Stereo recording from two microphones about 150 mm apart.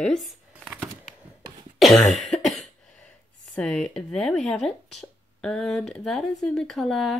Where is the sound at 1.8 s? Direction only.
Centre (ahead or behind).